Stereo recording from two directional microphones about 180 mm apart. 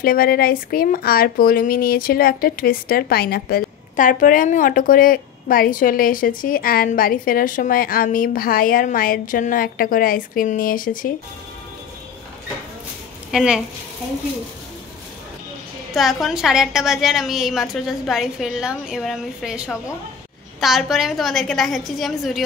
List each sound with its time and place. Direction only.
0.0 s speech: 55° left (ahead or behind)
13.3 s a woman's voice: 5° right (ahead or behind)
15.9 s a woman's voice: centre (ahead or behind)